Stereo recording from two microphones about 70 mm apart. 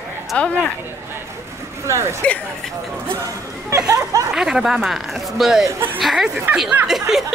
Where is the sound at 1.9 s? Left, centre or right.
Right.